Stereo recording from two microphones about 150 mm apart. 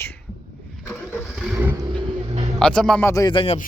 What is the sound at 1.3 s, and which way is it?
Roaring cats, centre (ahead or behind).